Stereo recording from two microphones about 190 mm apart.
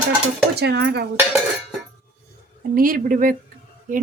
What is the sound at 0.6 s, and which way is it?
Speech, 60° right (ahead or behind).